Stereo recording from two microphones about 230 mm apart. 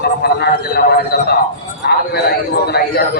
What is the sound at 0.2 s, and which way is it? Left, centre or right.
A man's voice, left.